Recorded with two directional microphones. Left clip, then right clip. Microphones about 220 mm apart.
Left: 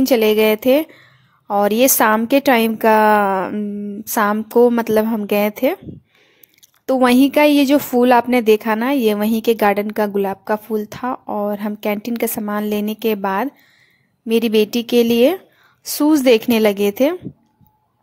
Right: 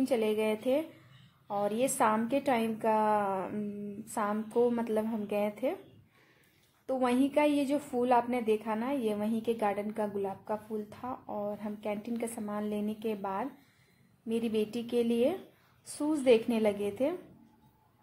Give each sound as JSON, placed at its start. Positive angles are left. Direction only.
{"t": 0.0, "sound": "a woman's voice", "side_deg": 45}
{"t": 6.9, "sound": "a woman's voice", "side_deg": 45}